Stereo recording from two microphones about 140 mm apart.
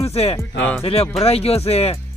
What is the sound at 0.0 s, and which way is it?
Speech, 45° left (ahead or behind).